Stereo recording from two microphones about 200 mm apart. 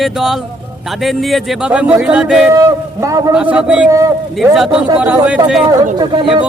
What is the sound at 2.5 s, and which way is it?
Speech, 15° right (ahead or behind).